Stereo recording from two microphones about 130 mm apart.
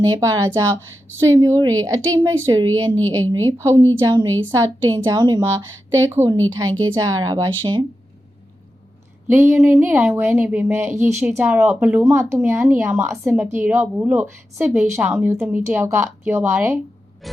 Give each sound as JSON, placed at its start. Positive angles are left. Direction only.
{"t": 0.0, "sound": "a woman's voice", "side_deg": -30}
{"t": 4.0, "sound": "a woman's voice", "side_deg": -35}
{"t": 9.3, "sound": "speech", "side_deg": -15}
{"t": 17.2, "sound": "music", "side_deg": 0}